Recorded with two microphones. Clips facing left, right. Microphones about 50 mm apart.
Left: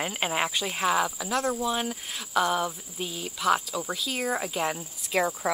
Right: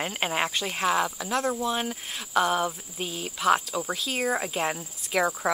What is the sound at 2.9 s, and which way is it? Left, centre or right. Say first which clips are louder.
Speech: right 1 dB; centre.